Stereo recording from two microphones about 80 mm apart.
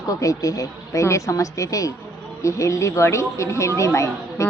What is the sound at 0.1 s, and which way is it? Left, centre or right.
A woman's voice, left.